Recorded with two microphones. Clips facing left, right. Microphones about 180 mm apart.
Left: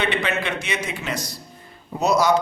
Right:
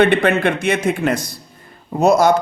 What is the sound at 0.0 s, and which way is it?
A man's voice, 55° right (ahead or behind).